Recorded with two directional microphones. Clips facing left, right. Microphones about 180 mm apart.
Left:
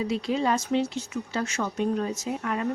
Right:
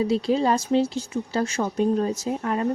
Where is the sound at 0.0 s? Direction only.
35° right (ahead or behind).